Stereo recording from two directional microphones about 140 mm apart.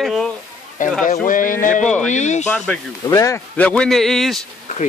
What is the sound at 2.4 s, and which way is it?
Speech, 10° left (ahead or behind).